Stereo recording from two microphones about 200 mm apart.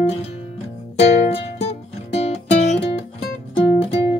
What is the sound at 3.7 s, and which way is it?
Music, 30° left (ahead or behind).